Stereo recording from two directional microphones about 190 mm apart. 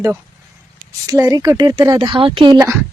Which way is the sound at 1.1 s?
20° right (ahead or behind).